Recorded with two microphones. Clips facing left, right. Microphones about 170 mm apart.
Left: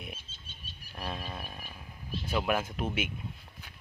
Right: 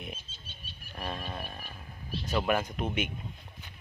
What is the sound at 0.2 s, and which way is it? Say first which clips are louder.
Wild animals: right 1 dB; 50° left (ahead or behind).